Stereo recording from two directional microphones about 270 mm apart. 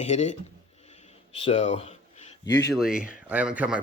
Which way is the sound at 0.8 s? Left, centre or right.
Left.